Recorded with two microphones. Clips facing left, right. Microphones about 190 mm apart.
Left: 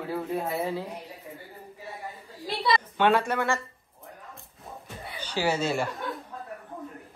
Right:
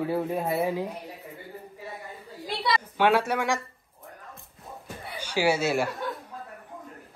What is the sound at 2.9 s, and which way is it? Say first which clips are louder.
Speech: right 2 dB; 10° right (ahead or behind).